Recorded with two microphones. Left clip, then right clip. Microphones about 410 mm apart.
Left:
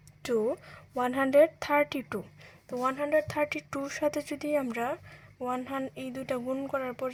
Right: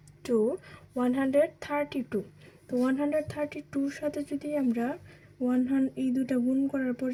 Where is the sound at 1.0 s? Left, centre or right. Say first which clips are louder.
Left 3 dB; left.